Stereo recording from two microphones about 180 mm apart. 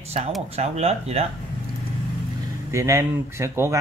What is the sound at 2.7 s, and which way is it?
Speech, 15° right (ahead or behind).